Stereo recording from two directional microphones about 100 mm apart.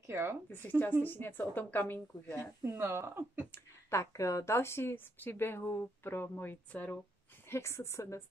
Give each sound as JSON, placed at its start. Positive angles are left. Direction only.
{"t": 0.0, "sound": "a woman's voice", "side_deg": -25}
{"t": 0.5, "sound": "a woman's voice", "side_deg": 20}
{"t": 2.6, "sound": "speech", "side_deg": -25}
{"t": 3.5, "sound": "a woman's voice", "side_deg": 30}
{"t": 7.4, "sound": "a woman's voice", "side_deg": 25}